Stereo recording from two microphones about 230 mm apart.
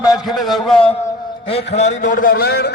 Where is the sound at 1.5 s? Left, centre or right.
Left.